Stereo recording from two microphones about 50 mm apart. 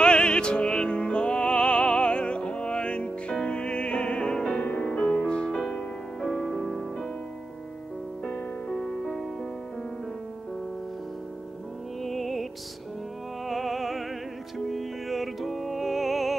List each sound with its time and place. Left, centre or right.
0.0 s music: centre
8.3 s music: centre
12.0 s music: centre
13.5 s music: centre